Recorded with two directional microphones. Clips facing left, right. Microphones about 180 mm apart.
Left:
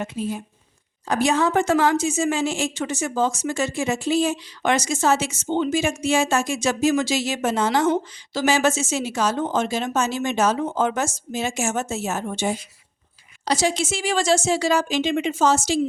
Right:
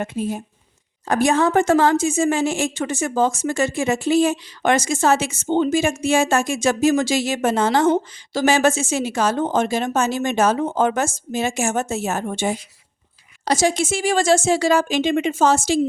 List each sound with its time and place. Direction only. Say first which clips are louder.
0.0 s a woman's voice: right 3 dB; 55° right (ahead or behind)